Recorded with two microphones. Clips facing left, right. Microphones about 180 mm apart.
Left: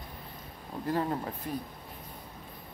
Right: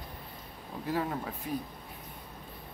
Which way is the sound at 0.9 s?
5° right (ahead or behind).